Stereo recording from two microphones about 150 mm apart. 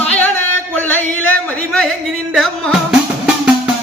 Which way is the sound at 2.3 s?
5° right (ahead or behind).